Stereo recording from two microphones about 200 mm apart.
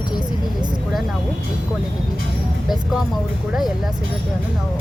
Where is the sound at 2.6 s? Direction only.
Centre (ahead or behind).